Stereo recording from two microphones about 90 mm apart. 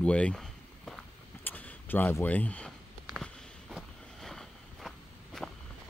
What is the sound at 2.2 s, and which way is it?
Speech, 15° left (ahead or behind).